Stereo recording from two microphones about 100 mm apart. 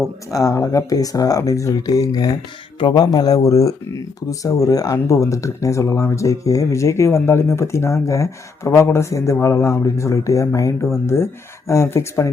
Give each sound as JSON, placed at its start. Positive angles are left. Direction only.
{"t": 0.3, "sound": "speech", "side_deg": 35}